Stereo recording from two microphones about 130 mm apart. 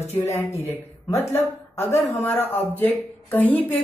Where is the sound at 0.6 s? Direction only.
20° left (ahead or behind).